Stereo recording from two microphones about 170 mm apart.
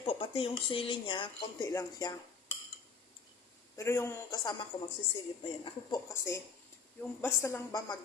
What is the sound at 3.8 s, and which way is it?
Speech, 15° left (ahead or behind).